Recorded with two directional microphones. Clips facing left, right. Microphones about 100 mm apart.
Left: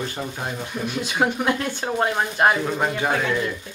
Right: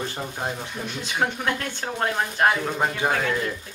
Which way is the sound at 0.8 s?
15° left (ahead or behind).